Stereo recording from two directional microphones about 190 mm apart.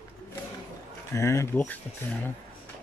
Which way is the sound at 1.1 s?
15° left (ahead or behind).